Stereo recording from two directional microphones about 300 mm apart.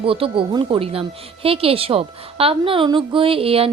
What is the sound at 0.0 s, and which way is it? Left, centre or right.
A woman's voice, centre.